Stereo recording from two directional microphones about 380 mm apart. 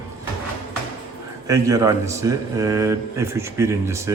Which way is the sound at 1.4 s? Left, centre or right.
Centre.